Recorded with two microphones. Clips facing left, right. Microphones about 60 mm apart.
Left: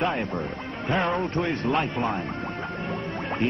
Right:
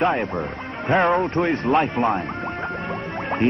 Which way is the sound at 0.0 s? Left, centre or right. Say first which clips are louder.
Right 5 dB; right.